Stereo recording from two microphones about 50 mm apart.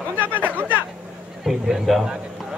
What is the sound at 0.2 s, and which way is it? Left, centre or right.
Chatter, right.